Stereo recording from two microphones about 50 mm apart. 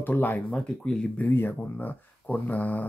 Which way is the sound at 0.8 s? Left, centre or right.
Centre.